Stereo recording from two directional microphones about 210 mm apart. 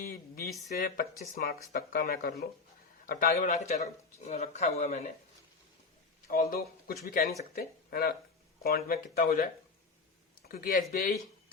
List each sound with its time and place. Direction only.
0.1 s a sound: 45° left (ahead or behind)
1.4 s speech: 45° left (ahead or behind); by 5.0 s 30° left (ahead or behind)
6.2 s speech: 45° left (ahead or behind)
10.5 s speech: 45° left (ahead or behind)